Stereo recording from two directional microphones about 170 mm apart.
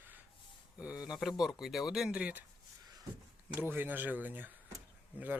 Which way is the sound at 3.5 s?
10° right (ahead or behind).